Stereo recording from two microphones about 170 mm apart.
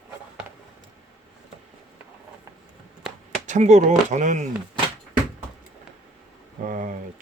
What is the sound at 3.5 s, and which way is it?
Speech, 45° right (ahead or behind).